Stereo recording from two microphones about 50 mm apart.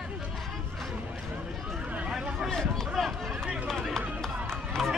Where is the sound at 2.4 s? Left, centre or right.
Centre.